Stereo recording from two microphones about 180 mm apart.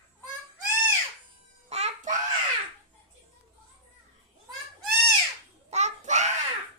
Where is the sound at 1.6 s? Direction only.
35° right (ahead or behind).